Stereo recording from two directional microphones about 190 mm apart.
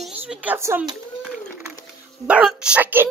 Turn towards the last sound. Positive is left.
turn(degrees=-10)  # may be behind; listen again after turning